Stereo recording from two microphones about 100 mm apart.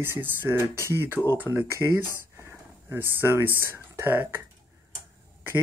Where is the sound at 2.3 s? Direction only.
25° right (ahead or behind).